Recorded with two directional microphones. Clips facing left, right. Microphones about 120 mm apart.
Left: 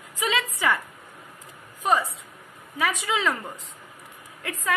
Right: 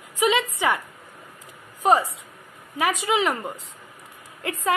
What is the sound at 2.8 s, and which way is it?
A woman's voice, 25° right (ahead or behind).